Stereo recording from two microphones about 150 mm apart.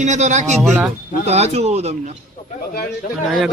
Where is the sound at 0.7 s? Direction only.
10° right (ahead or behind).